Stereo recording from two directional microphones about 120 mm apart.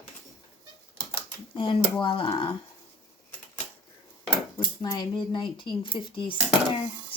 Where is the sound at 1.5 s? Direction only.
40° left (ahead or behind).